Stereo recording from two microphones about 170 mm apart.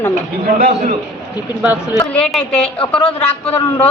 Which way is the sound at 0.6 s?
50° right (ahead or behind).